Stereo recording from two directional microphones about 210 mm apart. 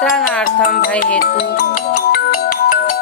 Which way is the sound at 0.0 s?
5° left (ahead or behind).